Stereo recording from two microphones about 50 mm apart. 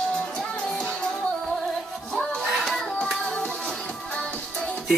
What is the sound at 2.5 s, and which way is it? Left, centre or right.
Music, centre.